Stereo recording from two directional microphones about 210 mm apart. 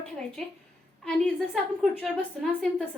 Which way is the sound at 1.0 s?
5° left (ahead or behind).